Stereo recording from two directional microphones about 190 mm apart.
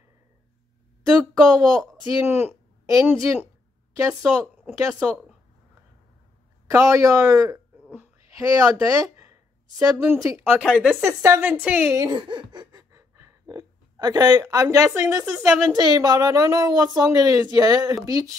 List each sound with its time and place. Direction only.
1.0 s speech: 20° right (ahead or behind)
1.5 s speech: centre (ahead or behind)
2.1 s a woman's voice: 10° right (ahead or behind)
4.1 s speech: 5° right (ahead or behind)
6.7 s speech: 15° right (ahead or behind)
7.9 s a sound: 15° right (ahead or behind)
9.8 s speech: 15° right (ahead or behind)
10.6 s speech: 5° right (ahead or behind)
12.0 s speech: 25° right (ahead or behind)